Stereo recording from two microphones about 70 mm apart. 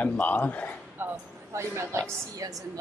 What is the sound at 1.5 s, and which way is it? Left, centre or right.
Speech, right.